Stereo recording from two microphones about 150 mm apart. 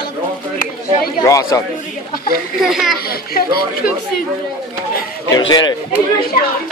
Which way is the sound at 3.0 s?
80° left.